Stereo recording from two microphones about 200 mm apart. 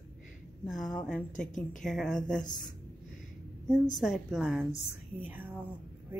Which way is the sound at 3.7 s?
Centre (ahead or behind).